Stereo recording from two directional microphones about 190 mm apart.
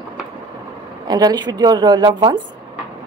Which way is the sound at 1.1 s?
20° right (ahead or behind).